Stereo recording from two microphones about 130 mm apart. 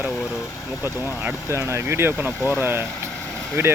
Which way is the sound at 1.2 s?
20° right (ahead or behind).